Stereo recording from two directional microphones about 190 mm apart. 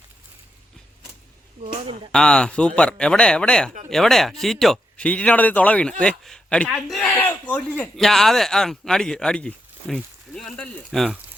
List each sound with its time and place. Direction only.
2.1 s speech: 5° left (ahead or behind)